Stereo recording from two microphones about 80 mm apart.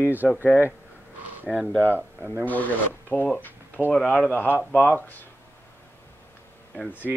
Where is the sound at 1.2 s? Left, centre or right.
Right.